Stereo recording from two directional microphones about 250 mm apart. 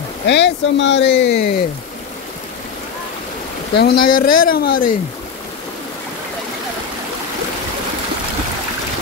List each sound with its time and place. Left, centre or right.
0.3 s speech: left
3.7 s speech: left